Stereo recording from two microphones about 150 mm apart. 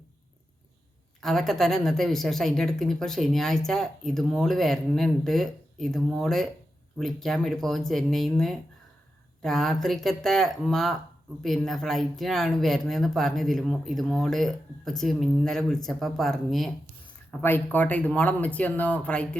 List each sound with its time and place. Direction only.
1.2 s speech: centre (ahead or behind)
17.4 s speech: 10° left (ahead or behind)